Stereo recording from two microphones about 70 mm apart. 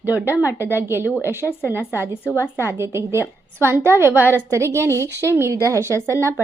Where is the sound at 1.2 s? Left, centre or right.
Left.